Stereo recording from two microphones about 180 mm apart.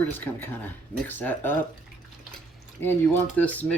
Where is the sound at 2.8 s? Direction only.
10° left (ahead or behind).